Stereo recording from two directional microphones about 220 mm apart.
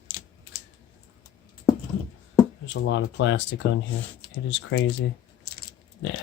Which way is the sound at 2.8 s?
55° left (ahead or behind).